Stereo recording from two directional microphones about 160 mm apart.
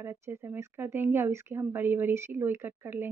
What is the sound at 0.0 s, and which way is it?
Speech, 15° right (ahead or behind).